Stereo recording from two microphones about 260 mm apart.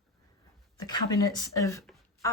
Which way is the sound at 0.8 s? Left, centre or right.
Centre.